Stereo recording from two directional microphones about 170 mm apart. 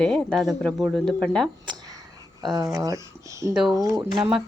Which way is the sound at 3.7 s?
20° right (ahead or behind).